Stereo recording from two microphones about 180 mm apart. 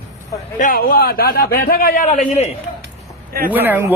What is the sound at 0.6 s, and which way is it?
A man's voice, 50° left (ahead or behind).